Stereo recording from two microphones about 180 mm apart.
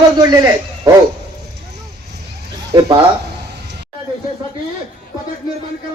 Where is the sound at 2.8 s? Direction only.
20° right (ahead or behind).